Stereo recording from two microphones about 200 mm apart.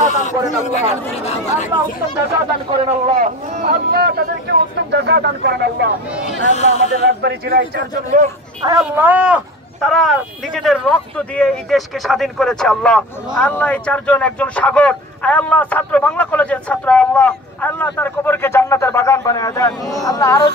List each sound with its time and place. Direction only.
0.1 s speech: 35° left (ahead or behind)
3.2 s speech: 35° right (ahead or behind)
3.6 s speech: 50° right (ahead or behind)
6.5 s speech: 35° left (ahead or behind)
7.2 s a man's voice: 55° right (ahead or behind)
8.6 s speech: 15° right (ahead or behind); by 20.5 s 20° left (ahead or behind)